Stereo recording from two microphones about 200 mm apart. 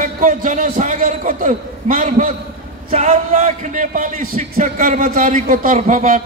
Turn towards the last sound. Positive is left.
turn(degrees=-40)  # may be behind; listen again after turning